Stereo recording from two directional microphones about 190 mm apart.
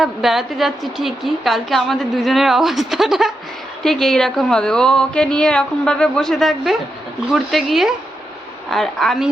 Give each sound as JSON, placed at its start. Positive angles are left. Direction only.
{"t": 0.0, "sound": "a woman's voice", "side_deg": 0}